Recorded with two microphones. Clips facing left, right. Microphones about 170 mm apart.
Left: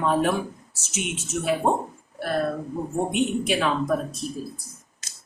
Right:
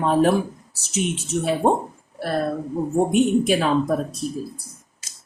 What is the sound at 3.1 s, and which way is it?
Speech, 40° right (ahead or behind).